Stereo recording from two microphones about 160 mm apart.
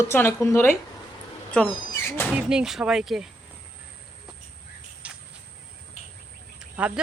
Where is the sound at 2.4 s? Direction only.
5° right (ahead or behind).